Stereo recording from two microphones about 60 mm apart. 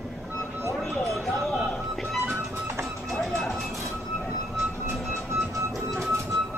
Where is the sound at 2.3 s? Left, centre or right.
Right.